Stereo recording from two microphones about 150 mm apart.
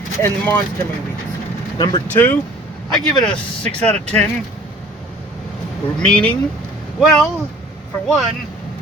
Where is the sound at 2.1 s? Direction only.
10° left (ahead or behind).